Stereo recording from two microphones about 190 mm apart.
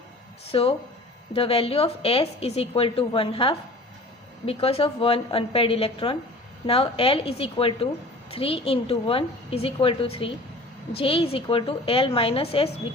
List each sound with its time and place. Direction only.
0.5 s a woman's voice: 30° left (ahead or behind)